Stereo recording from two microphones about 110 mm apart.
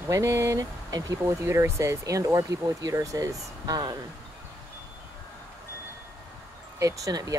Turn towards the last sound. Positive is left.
turn(degrees=-30)  # may be behind; listen again after turning